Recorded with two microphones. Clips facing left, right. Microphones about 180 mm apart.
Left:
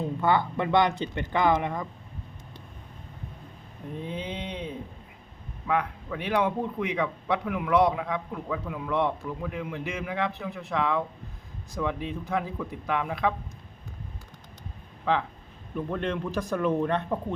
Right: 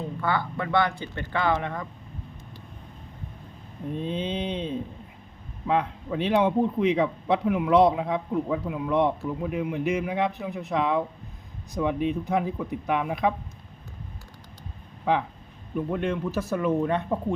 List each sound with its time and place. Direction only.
0.2 s speech: 20° left (ahead or behind)
3.9 s a man's voice: 20° right (ahead or behind)
15.1 s speech: 15° right (ahead or behind)